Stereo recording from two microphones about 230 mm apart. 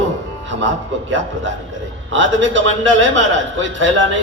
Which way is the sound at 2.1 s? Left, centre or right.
Right.